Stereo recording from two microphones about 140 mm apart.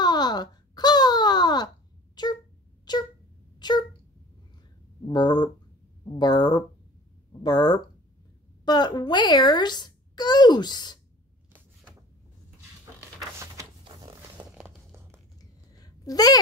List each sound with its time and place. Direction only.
0.0 s wail: 30° left (ahead or behind)
2.2 s a sound: 30° left (ahead or behind)
5.0 s a child's voice: 30° left (ahead or behind)
13.8 s zipper: 30° right (ahead or behind)
14.5 s crumpling: 15° right (ahead or behind)
15.8 s a sound: 25° left (ahead or behind)